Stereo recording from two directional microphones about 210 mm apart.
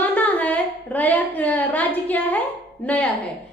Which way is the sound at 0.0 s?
5° left (ahead or behind).